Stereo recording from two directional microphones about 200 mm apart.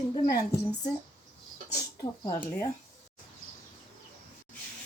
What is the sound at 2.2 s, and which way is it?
Speech, 15° left (ahead or behind).